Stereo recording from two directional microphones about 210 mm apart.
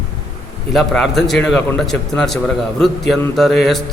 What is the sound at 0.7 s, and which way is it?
A man's voice, centre (ahead or behind).